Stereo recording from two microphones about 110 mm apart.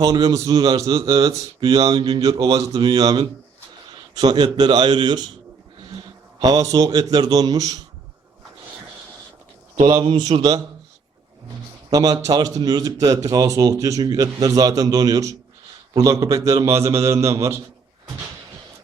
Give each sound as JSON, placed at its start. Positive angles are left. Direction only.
{"t": 0.0, "sound": "a man's voice", "side_deg": -35}
{"t": 1.2, "sound": "speech", "side_deg": -35}
{"t": 5.8, "sound": "a sound", "side_deg": -50}
{"t": 6.4, "sound": "speech", "side_deg": -35}
{"t": 9.8, "sound": "a man's voice", "side_deg": -50}
{"t": 11.9, "sound": "speech", "side_deg": -35}